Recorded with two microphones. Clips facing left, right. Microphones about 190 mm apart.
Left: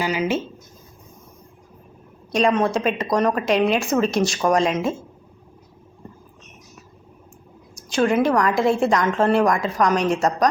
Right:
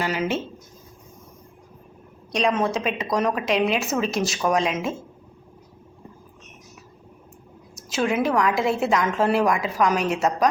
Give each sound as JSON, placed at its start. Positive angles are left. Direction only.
{"t": 0.0, "sound": "a woman's voice", "side_deg": 0}
{"t": 2.3, "sound": "a woman's voice", "side_deg": 0}
{"t": 7.8, "sound": "a woman's voice", "side_deg": -5}